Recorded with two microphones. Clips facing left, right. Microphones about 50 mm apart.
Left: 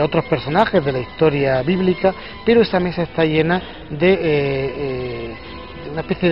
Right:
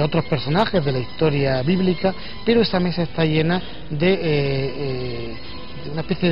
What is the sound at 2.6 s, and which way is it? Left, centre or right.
A man's voice, centre.